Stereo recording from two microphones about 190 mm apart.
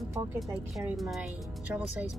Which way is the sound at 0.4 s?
Centre (ahead or behind).